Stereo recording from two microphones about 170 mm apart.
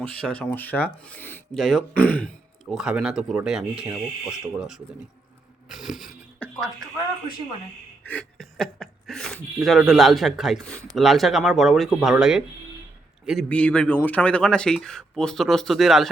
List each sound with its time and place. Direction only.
0.0 s speech: 5° left (ahead or behind)
2.6 s speech: 5° right (ahead or behind)
6.4 s a sound: 10° left (ahead or behind)
8.0 s speech: 10° left (ahead or behind)